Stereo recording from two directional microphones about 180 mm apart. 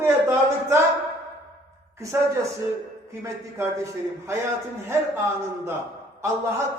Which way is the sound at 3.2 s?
15° right (ahead or behind).